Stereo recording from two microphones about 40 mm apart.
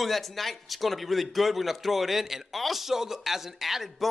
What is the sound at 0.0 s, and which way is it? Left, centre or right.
A man's voice, centre.